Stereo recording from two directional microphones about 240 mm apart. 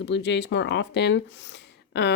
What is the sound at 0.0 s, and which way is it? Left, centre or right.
Speech, left.